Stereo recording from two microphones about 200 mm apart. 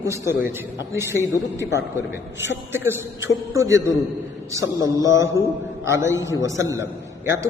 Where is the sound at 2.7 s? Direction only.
10° right (ahead or behind).